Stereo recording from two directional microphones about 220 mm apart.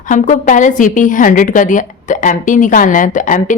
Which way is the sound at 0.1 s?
35° left (ahead or behind).